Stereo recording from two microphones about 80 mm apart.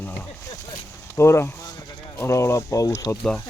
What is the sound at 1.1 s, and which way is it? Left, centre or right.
Speech, left.